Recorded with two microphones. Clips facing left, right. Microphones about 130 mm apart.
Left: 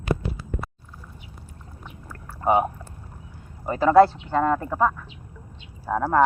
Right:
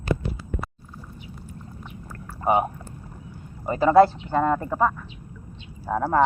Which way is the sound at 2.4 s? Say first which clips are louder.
Left 1 dB; centre (ahead or behind).